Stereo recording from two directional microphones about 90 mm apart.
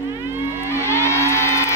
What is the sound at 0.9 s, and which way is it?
Music, 30° left (ahead or behind).